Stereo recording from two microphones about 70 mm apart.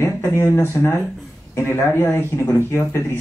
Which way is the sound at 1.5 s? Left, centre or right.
Left.